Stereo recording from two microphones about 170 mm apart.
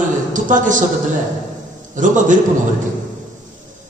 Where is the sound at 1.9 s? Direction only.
50° right (ahead or behind).